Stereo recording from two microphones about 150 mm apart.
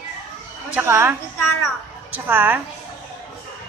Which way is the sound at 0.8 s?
15° right (ahead or behind).